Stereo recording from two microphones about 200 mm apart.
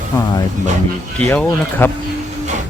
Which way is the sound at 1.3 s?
10° left (ahead or behind).